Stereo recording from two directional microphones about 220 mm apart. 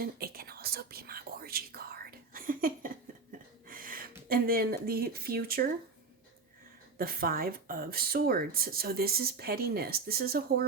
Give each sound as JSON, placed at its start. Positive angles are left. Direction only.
{"t": 0.0, "sound": "whispering", "side_deg": -45}
{"t": 3.7, "sound": "a sound", "side_deg": -40}
{"t": 4.3, "sound": "speech", "side_deg": -40}
{"t": 7.0, "sound": "speech", "side_deg": -45}